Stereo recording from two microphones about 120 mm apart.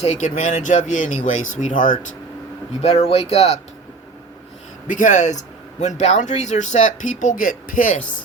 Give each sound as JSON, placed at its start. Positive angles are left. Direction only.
{"t": 0.0, "sound": "a man's voice", "side_deg": 75}
{"t": 2.8, "sound": "speech", "side_deg": 55}
{"t": 4.9, "sound": "a man's voice", "side_deg": 90}